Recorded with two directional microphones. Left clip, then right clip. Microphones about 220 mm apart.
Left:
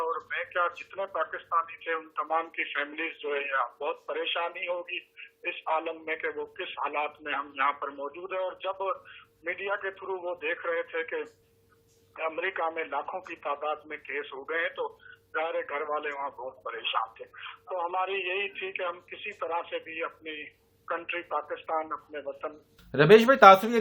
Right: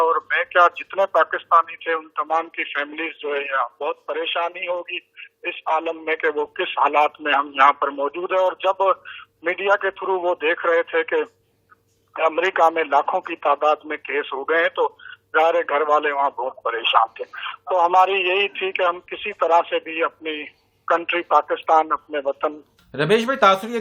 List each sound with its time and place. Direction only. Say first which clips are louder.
0.0 s speech: right 13 dB; 45° right (ahead or behind)
22.9 s speech: left 1 dB; centre (ahead or behind)